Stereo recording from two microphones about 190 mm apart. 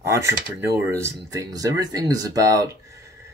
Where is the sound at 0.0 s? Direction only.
15° right (ahead or behind).